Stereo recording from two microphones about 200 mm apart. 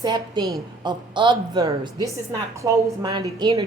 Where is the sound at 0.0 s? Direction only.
20° right (ahead or behind).